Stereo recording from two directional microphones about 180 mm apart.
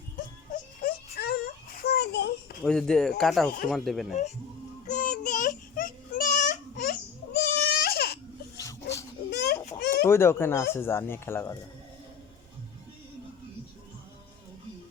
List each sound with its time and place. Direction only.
0.5 s a sound: 55° left (ahead or behind)
2.6 s speech: 5° left (ahead or behind)
4.9 s child singing: 45° left (ahead or behind)
7.3 s baby cry: 60° left (ahead or behind)
8.5 s a sound: 20° left (ahead or behind)
9.8 s chicken: 65° left (ahead or behind)
10.1 s speech: 15° left (ahead or behind)